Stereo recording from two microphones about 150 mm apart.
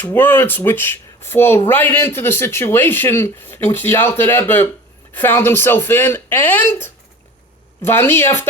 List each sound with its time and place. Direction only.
0.0 s speech: 15° left (ahead or behind)